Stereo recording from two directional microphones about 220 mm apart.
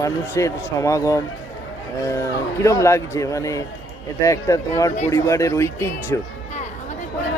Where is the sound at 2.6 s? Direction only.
15° left (ahead or behind).